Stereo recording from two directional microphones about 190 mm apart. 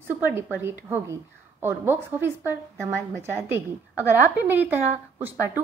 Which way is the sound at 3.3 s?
15° right (ahead or behind).